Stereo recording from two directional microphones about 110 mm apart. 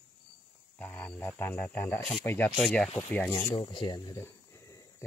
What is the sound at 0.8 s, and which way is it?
Speech, 20° left (ahead or behind).